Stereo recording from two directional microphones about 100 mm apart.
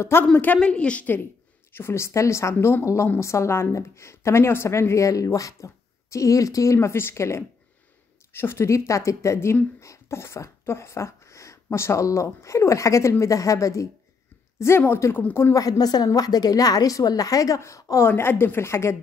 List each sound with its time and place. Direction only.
0.0 s a woman's voice: 25° left (ahead or behind)
15.5 s a woman's voice: 35° left (ahead or behind)